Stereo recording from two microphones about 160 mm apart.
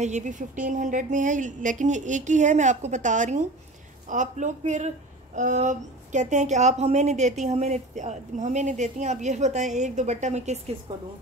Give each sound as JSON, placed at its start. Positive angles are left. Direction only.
{"t": 0.0, "sound": "speech", "side_deg": -50}
{"t": 10.9, "sound": "a woman's voice", "side_deg": -25}